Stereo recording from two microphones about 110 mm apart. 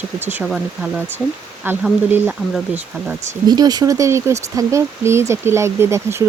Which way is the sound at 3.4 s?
35° right (ahead or behind).